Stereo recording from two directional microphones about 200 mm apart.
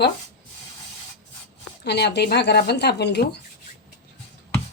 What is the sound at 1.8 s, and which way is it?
Speech, 55° left (ahead or behind).